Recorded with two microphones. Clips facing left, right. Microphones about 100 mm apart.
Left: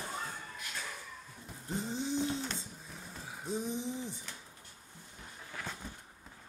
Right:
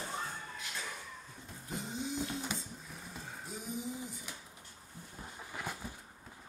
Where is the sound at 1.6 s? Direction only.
30° left (ahead or behind).